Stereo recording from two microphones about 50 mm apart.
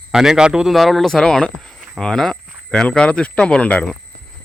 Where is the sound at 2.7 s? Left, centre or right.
Centre.